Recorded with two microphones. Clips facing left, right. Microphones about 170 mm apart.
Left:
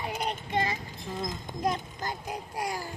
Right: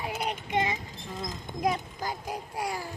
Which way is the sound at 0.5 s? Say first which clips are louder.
Right 1 dB; 20° right (ahead or behind).